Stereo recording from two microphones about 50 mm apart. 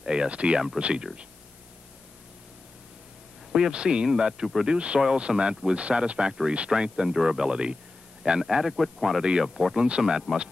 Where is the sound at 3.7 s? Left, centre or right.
Centre.